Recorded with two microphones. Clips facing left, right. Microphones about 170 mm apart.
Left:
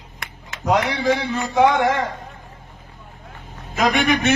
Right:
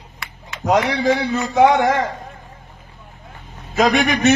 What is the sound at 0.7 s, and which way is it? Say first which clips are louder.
A man's voice: right 2 dB; 45° right (ahead or behind).